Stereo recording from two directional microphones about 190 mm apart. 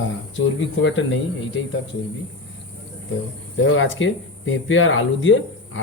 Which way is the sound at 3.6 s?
80° left.